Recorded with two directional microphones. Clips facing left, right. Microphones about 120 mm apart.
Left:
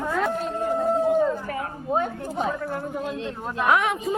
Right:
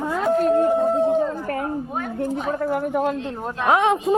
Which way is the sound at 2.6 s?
70° right (ahead or behind).